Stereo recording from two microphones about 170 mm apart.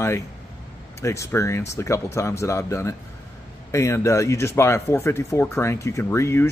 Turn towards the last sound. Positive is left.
turn(degrees=15)  # may be behind; listen again after turning